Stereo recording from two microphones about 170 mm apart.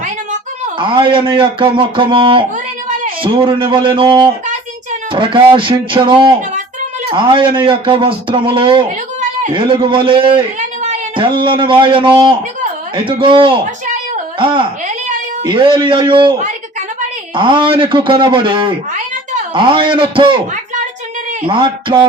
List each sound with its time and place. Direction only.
0.8 s speech: 30° right (ahead or behind)
17.3 s speech: 30° right (ahead or behind)
21.4 s speech: 30° right (ahead or behind)